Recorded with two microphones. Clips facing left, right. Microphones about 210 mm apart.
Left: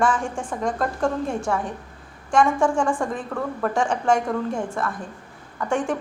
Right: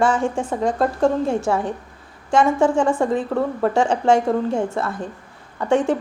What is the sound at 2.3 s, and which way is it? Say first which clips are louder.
A woman's voice: right 3 dB; 25° right (ahead or behind).